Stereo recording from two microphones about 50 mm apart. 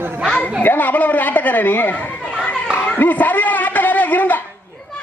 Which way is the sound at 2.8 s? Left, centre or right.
Left.